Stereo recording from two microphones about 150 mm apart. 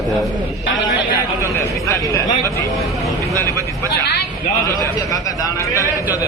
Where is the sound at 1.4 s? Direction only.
20° left (ahead or behind).